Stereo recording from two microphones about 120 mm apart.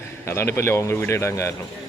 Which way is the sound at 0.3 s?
20° left (ahead or behind).